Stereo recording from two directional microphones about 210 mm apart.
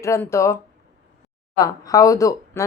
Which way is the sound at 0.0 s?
15° left (ahead or behind).